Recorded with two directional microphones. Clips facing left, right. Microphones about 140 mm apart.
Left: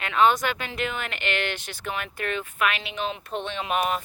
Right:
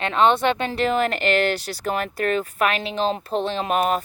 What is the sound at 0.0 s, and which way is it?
Speech, 30° right (ahead or behind).